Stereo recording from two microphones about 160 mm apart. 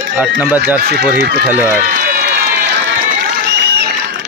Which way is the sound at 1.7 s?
65° right (ahead or behind).